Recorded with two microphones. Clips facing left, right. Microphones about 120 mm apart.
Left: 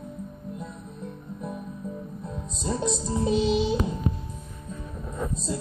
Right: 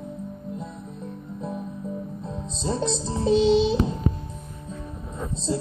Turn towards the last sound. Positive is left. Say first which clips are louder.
# right 5 dB
turn(degrees=-25)  # may be behind; listen again after turning